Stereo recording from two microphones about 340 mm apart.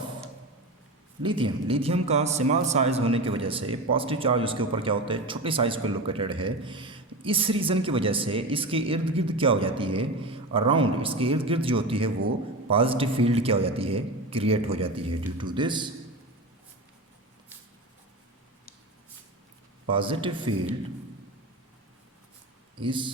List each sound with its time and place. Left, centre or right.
1.2 s speech: centre
19.9 s speech: centre
22.8 s speech: centre